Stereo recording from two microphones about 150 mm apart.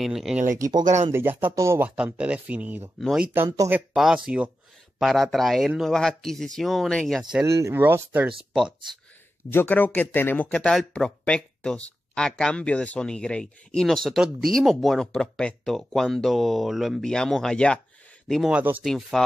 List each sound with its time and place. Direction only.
0.0 s speech: centre (ahead or behind)
0.6 s speech: 25° right (ahead or behind)
1.1 s speech: 15° right (ahead or behind)
3.0 s speech: centre (ahead or behind)
3.4 s speech: 20° right (ahead or behind)
3.7 s speech: 5° right (ahead or behind)
7.4 s speech: 20° right (ahead or behind)
9.5 s speech: 15° left (ahead or behind)
18.3 s speech: 5° right (ahead or behind)